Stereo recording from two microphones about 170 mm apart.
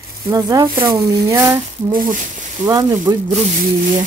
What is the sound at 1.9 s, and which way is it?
Speech, 55° right (ahead or behind).